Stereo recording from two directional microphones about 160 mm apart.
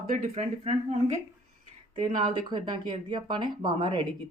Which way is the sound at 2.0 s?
45° right (ahead or behind).